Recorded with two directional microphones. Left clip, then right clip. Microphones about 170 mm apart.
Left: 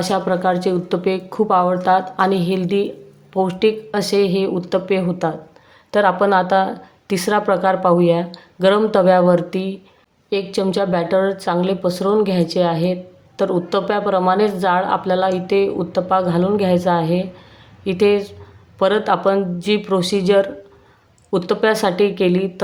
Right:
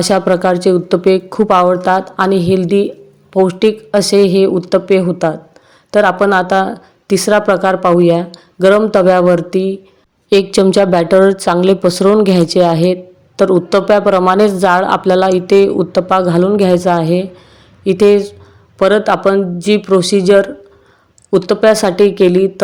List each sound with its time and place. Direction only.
0.0 s a woman's voice: 35° right (ahead or behind)
10.2 s a woman's voice: 45° right (ahead or behind)